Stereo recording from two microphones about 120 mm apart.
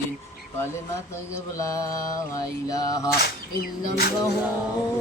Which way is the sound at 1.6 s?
25° left (ahead or behind).